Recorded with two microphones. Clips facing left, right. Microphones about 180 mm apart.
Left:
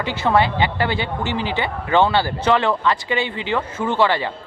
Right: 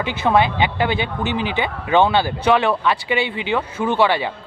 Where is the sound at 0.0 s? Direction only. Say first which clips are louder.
Right 1 dB; 15° right (ahead or behind).